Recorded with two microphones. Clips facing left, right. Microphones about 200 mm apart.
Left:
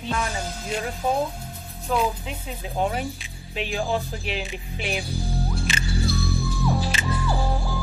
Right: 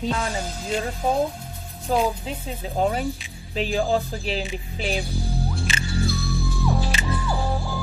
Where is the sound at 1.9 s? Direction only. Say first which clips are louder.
Right 2 dB; 35° right (ahead or behind).